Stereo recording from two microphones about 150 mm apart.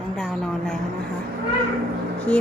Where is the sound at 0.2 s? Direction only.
5° left (ahead or behind).